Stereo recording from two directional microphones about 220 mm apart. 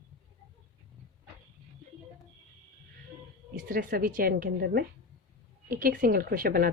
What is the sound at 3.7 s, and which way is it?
A woman's voice, 40° right (ahead or behind).